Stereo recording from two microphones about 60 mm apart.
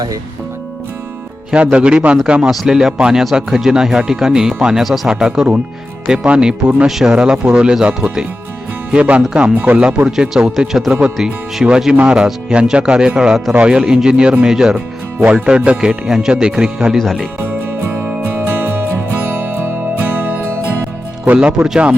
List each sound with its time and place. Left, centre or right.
1.5 s speech: centre
2.4 s speech: centre; by 10.1 s right
10.1 s speech: centre
17.0 s speech: centre
20.0 s music: right
21.3 s speech: centre